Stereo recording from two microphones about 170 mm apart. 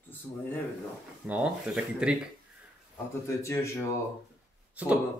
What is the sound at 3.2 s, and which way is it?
Speech, 15° left (ahead or behind).